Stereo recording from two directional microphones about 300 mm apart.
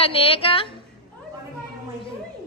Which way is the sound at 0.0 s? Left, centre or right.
Centre.